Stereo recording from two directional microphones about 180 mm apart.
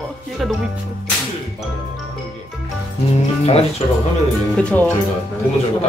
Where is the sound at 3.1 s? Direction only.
35° left (ahead or behind).